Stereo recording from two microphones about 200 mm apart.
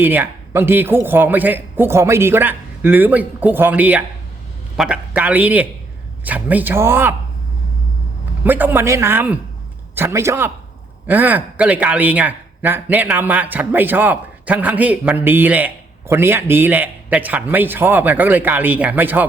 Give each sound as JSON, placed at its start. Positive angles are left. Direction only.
{"t": 0.0, "sound": "speech", "side_deg": -10}
{"t": 8.4, "sound": "a man's voice", "side_deg": -10}